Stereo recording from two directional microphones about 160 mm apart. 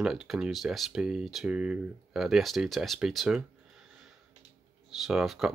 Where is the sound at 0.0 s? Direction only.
Centre (ahead or behind).